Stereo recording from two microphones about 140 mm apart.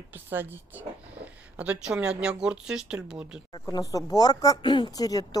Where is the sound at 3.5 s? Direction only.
25° left (ahead or behind).